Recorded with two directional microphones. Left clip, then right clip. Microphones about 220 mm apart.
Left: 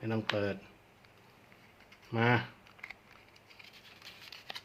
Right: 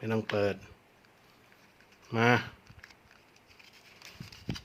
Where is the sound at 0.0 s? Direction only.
40° right (ahead or behind).